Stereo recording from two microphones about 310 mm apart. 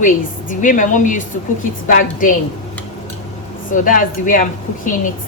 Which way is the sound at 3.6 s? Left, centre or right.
Left.